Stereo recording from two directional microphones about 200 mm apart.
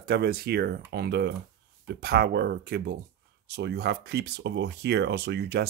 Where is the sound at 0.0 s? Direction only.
50° right (ahead or behind).